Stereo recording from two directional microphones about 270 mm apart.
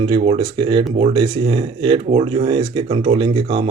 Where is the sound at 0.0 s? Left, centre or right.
Centre.